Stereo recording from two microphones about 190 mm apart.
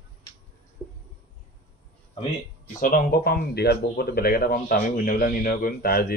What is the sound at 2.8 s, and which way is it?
Speech, 50° left (ahead or behind).